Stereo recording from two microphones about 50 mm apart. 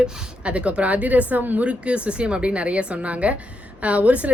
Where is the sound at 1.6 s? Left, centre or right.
Right.